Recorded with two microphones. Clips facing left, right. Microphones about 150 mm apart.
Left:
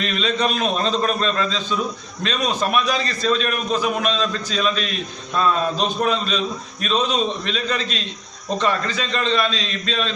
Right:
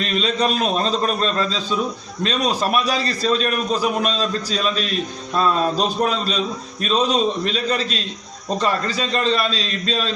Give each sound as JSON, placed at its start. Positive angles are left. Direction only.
{"t": 0.0, "sound": "a man's voice", "side_deg": -35}